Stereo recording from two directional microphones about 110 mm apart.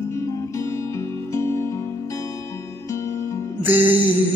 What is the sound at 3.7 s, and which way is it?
Music, 20° right (ahead or behind).